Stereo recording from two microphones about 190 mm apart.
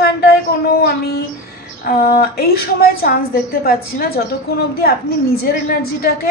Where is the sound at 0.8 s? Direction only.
55° left (ahead or behind).